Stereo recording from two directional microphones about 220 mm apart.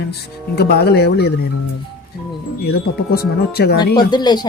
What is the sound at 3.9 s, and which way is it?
Speech, 20° left (ahead or behind).